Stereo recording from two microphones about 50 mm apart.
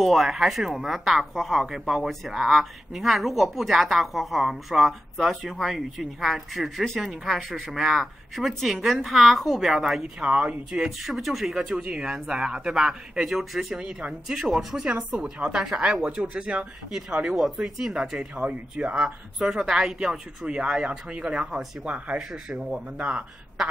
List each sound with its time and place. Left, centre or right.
0.0 s speech: centre
10.2 s speech: right
10.7 s speech: centre
14.9 s speech: centre
18.3 s speech: right
22.3 s speech: centre
22.9 s a man's voice: right